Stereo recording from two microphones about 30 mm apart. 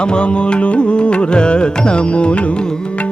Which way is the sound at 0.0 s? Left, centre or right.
Left.